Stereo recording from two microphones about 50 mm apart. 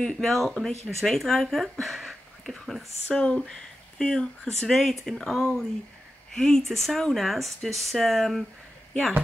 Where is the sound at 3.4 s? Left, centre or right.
Centre.